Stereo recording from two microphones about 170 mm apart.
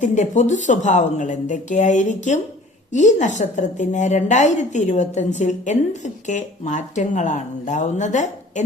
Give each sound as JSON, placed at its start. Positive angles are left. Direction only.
{"t": 0.0, "sound": "a woman's voice", "side_deg": 45}